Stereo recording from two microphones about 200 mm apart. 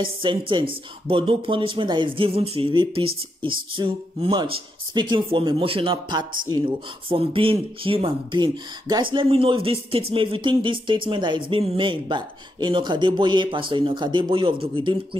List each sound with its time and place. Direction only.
0.0 s speech: 25° right (ahead or behind)